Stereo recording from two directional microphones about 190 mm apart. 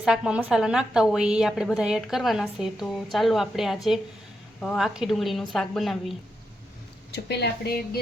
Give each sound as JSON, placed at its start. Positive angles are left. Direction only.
{"t": 0.0, "sound": "a woman's voice", "side_deg": -5}
{"t": 7.1, "sound": "speech", "side_deg": 60}